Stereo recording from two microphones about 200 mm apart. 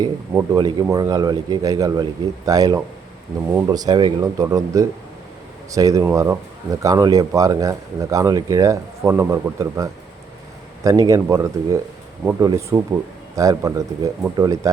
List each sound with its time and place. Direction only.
0.0 s speech: 20° right (ahead or behind)